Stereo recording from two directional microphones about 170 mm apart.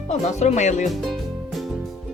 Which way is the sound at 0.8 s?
Centre (ahead or behind).